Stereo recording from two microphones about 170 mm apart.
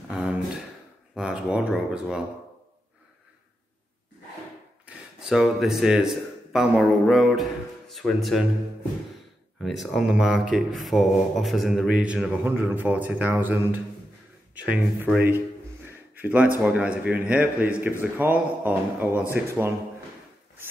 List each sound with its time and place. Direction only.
1.1 s speech: 5° right (ahead or behind)
4.8 s speech: centre (ahead or behind)
9.6 s a man's voice: centre (ahead or behind)
15.9 s a sound: 10° right (ahead or behind)
16.6 s a man's voice: 10° right (ahead or behind)